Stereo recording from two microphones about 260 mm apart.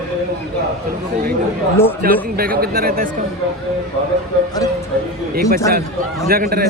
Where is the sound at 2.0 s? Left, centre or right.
Right.